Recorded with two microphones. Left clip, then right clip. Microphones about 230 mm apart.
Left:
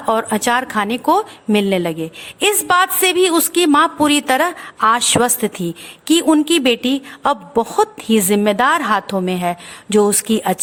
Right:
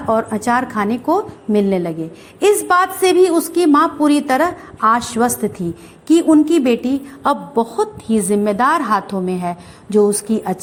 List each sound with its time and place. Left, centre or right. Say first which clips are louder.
0.1 s a woman's voice: even; left